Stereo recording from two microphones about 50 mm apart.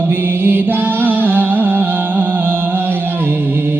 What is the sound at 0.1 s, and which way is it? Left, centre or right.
Music, right.